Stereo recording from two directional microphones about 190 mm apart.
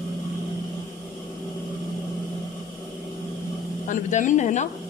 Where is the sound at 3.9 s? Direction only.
40° left (ahead or behind).